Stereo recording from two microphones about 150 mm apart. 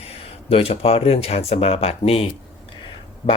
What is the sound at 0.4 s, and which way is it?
Speech, 40° left (ahead or behind).